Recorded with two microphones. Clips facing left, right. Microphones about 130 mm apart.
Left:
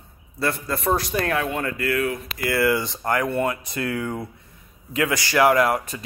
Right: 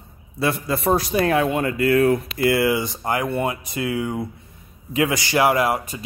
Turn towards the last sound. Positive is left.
turn(degrees=-10)  # may be behind; listen again after turning